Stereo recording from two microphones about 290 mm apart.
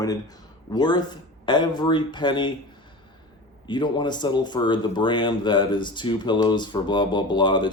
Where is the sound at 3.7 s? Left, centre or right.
Centre.